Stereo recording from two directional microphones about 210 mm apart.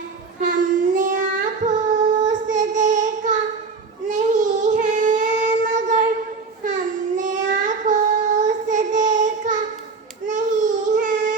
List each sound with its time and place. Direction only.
0.4 s child singing: 35° right (ahead or behind)
7.6 s music: 35° right (ahead or behind)
8.4 s child singing: 35° right (ahead or behind)